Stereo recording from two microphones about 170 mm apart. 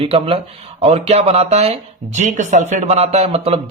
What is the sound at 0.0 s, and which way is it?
A man's voice, 35° right (ahead or behind).